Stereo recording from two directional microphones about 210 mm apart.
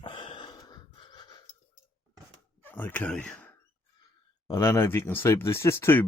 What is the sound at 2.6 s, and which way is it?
Speech, 10° left (ahead or behind).